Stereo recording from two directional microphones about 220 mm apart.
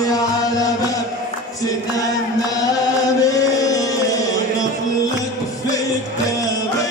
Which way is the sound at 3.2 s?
15° left (ahead or behind).